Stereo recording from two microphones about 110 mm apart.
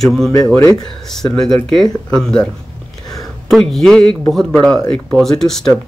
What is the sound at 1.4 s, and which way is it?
Speech, 5° left (ahead or behind).